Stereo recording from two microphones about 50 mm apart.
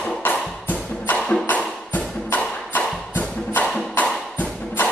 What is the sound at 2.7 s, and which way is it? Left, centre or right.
Music, left.